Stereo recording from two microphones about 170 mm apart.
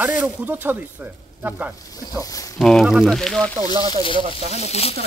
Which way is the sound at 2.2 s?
20° left (ahead or behind).